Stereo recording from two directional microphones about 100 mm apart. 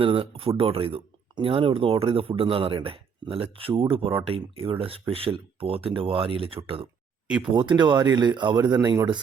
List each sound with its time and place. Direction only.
0.0 s speech: 60° right (ahead or behind)
7.5 s speech: 50° right (ahead or behind)